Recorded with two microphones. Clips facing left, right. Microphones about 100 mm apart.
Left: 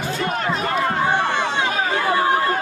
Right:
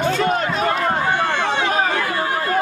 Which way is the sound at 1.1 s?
15° left (ahead or behind).